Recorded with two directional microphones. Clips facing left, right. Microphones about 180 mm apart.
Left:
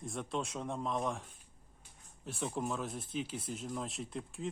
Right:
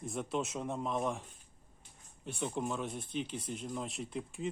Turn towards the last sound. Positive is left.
turn(degrees=0)  # may be behind; listen again after turning